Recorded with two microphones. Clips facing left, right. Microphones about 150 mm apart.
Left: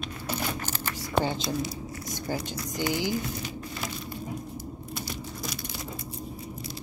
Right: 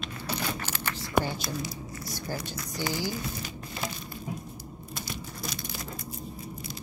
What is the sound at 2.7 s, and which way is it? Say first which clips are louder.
Speech: left 3 dB; 15° left (ahead or behind).